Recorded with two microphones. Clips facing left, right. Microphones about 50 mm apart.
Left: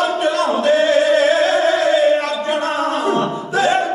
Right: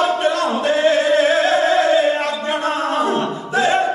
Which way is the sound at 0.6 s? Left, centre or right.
Right.